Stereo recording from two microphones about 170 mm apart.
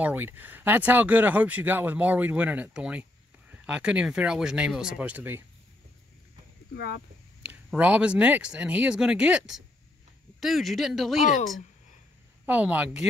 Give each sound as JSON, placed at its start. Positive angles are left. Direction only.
{"t": 0.0, "sound": "speech", "side_deg": -10}
{"t": 6.7, "sound": "speech", "side_deg": 70}
{"t": 7.4, "sound": "speech", "side_deg": -10}
{"t": 12.4, "sound": "speech", "side_deg": -10}